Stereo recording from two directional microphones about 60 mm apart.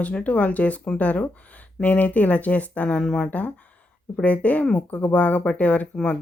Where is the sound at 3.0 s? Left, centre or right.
Centre.